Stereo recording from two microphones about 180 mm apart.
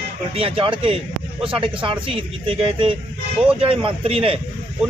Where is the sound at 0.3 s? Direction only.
30° right (ahead or behind).